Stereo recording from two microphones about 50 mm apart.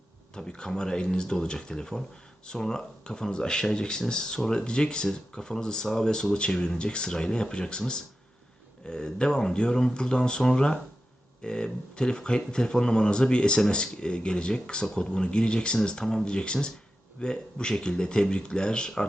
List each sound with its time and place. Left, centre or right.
0.3 s speech: centre